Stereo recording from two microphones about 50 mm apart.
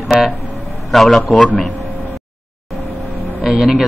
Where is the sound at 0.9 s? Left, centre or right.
Centre.